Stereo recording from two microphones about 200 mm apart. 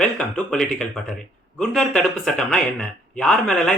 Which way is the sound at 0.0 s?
5° left (ahead or behind).